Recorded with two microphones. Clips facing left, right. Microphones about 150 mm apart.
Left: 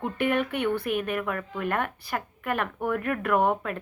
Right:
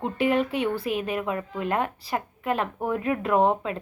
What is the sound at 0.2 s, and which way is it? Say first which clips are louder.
Speech: right 3 dB; 60° left (ahead or behind).